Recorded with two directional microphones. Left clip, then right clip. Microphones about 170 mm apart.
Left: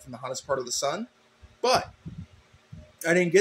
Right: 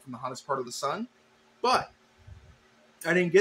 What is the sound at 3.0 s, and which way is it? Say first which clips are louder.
Speech: left 2 dB; 15° left (ahead or behind).